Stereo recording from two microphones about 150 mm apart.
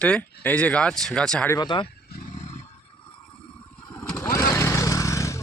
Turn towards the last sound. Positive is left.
turn(degrees=20)  # may be behind; listen again after turning